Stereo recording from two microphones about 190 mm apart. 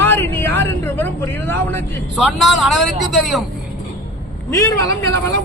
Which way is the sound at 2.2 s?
Centre (ahead or behind).